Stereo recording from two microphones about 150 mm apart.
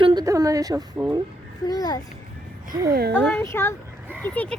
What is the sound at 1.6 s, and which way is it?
Speech, 25° left (ahead or behind).